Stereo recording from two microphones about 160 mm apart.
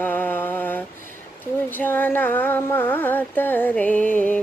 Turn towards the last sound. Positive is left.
turn(degrees=10)  # may be behind; listen again after turning